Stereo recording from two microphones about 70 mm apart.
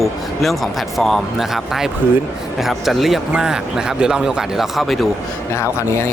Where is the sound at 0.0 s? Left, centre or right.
Centre.